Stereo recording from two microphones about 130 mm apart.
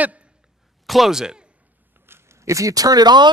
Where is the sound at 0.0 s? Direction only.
10° right (ahead or behind).